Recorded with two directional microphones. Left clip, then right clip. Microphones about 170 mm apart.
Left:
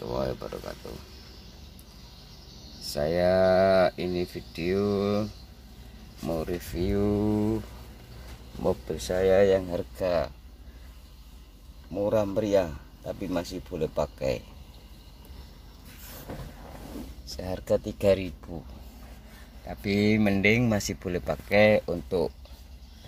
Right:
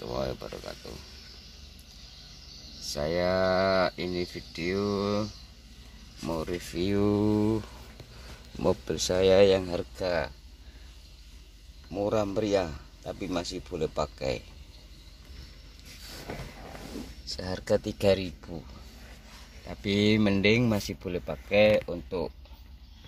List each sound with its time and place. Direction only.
0.0 s a sound: 5° left (ahead or behind)
2.9 s speech: 5° left (ahead or behind)
6.7 s speech: 20° right (ahead or behind)
8.6 s speech: 30° right (ahead or behind); by 10.3 s 10° right (ahead or behind)
11.9 s speech: 5° right (ahead or behind)
17.3 s speech: centre (ahead or behind)
19.7 s speech: centre (ahead or behind)
21.8 s speech: 30° left (ahead or behind)